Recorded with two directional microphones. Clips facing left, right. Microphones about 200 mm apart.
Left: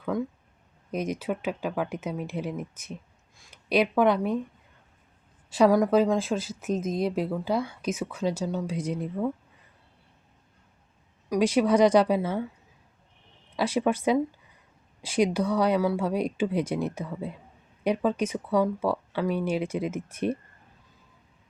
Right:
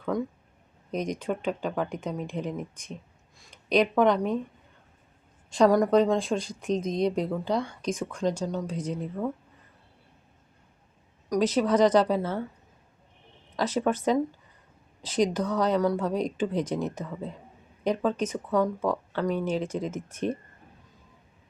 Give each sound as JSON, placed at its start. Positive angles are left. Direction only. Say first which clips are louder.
{"t": 0.0, "sound": "speech", "louder": "even", "side_deg": 5}
{"t": 5.5, "sound": "a woman's voice", "louder": "even", "side_deg": 5}
{"t": 11.3, "sound": "speech", "louder": "left 1 dB", "side_deg": 10}
{"t": 13.6, "sound": "speech", "louder": "left 1 dB", "side_deg": 10}